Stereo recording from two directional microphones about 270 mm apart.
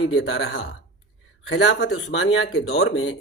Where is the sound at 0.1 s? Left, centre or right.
Left.